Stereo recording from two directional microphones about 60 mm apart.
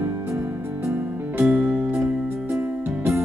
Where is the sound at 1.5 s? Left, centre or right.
Right.